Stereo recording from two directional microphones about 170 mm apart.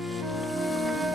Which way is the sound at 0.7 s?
Centre (ahead or behind).